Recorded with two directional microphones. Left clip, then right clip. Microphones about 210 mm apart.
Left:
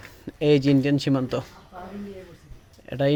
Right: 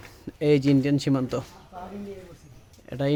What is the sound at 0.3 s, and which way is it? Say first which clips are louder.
Speech: left 2 dB; centre (ahead or behind).